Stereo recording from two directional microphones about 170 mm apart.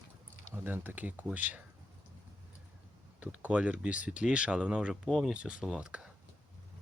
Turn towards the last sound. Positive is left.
turn(degrees=-5)  # may be behind; listen again after turning